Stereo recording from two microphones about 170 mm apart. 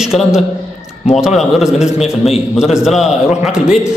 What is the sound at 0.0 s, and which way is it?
A man's voice, 5° right (ahead or behind).